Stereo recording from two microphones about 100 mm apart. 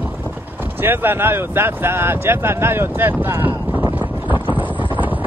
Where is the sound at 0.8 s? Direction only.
20° right (ahead or behind).